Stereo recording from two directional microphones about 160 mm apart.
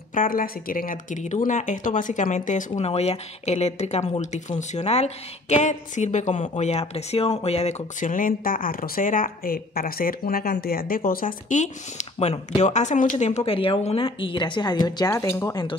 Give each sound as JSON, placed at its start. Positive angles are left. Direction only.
{"t": 0.1, "sound": "speech", "side_deg": 60}